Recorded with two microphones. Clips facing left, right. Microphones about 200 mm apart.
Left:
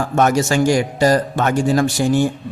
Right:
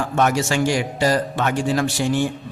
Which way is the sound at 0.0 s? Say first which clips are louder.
Left 4 dB; 45° left (ahead or behind).